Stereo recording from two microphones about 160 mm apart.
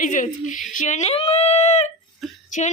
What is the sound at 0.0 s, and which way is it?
A woman's voice, 55° left (ahead or behind).